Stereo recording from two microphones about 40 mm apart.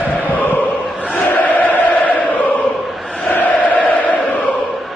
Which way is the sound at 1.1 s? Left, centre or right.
Left.